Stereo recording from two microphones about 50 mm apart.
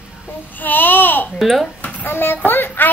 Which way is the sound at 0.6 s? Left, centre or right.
Left.